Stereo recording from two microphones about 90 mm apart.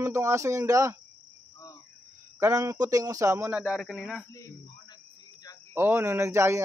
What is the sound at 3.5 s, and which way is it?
Speech, 15° right (ahead or behind).